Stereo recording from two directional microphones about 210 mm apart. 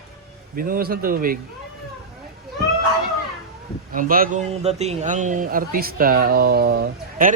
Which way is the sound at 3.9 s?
40° right (ahead or behind).